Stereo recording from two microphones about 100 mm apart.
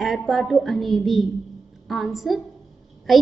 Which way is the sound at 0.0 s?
Centre (ahead or behind).